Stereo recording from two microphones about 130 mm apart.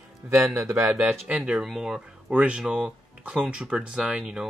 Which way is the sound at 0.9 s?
10° right (ahead or behind).